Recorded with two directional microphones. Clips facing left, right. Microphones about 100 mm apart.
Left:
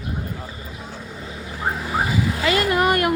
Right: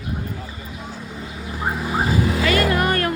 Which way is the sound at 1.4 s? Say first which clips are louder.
Right 1 dB; 10° right (ahead or behind).